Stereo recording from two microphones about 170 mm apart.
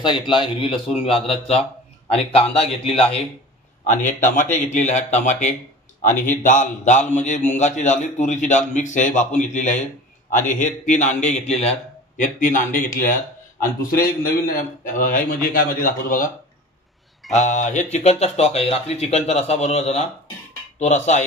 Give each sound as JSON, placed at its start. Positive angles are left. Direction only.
{"t": 0.0, "sound": "speech", "side_deg": 30}
{"t": 3.8, "sound": "a man's voice", "side_deg": 45}
{"t": 17.3, "sound": "a man's voice", "side_deg": 45}